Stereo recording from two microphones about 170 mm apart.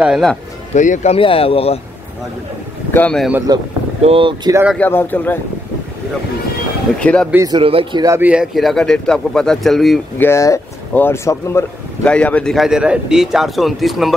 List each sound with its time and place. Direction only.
0.0 s speech: centre (ahead or behind)
0.7 s speech: 45° left (ahead or behind)
2.9 s a man's voice: 10° left (ahead or behind)
3.5 s speech: 20° right (ahead or behind)
4.0 s speech: 30° right (ahead or behind)
4.7 s a man's voice: 10° left (ahead or behind)
7.0 s a man's voice: 5° left (ahead or behind)
7.2 s a man's voice: 15° right (ahead or behind)
7.5 s speech: 30° right (ahead or behind)
8.2 s speech: 5° right (ahead or behind)
10.1 s speech: 15° left (ahead or behind)